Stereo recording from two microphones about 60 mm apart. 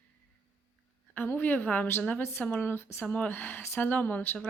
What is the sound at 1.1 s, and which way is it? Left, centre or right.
A woman's voice, left.